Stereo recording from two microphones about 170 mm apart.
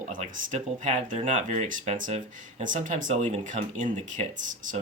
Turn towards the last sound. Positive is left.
turn(degrees=-45)  # may be behind; listen again after turning